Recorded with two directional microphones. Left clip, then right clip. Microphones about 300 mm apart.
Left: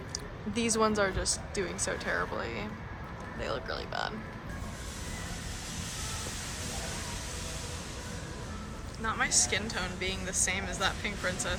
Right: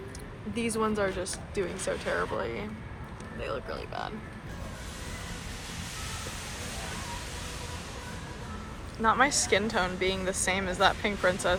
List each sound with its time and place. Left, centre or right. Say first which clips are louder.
0.6 s a woman's voice: left 1 dB; centre
9.0 s a woman's voice: right 5 dB; centre